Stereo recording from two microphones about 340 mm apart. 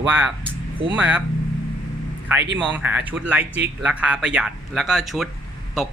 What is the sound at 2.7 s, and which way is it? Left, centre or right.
Speech, centre.